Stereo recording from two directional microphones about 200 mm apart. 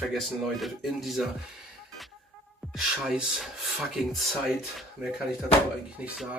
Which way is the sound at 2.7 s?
Centre (ahead or behind).